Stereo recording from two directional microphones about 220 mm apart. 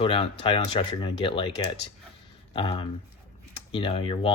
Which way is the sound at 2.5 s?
25° left (ahead or behind).